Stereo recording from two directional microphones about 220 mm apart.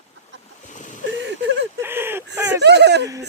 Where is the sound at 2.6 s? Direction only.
50° right (ahead or behind).